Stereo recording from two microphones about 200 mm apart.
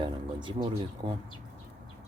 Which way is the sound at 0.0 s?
25° right (ahead or behind).